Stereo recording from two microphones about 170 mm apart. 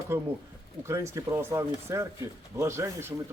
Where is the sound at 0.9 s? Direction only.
15° right (ahead or behind).